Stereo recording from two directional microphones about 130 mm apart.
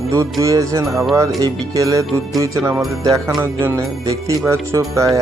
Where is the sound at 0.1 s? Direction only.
25° right (ahead or behind).